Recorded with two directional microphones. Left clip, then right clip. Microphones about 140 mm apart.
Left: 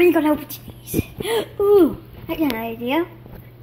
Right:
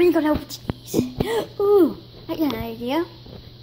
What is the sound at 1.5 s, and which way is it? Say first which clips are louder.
A woman's voice: left 2 dB; centre (ahead or behind).